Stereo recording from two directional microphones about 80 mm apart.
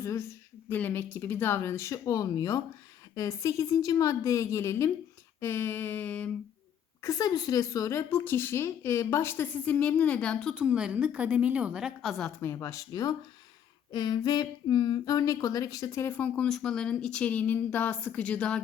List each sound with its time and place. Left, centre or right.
0.0 s a woman's voice: left
0.7 s a woman's voice: left
3.2 s a woman's voice: left
5.4 s a sound: left
7.0 s a woman's voice: left
9.6 s speech: centre
10.5 s a woman's voice: centre
12.4 s a woman's voice: left
12.9 s speech: left
13.9 s speech: left
16.0 s speech: centre